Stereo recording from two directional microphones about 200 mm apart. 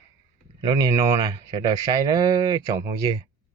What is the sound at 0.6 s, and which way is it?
Speech, 15° right (ahead or behind).